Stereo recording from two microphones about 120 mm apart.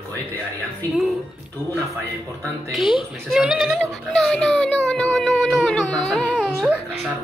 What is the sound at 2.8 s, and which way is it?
Speech, 45° left (ahead or behind).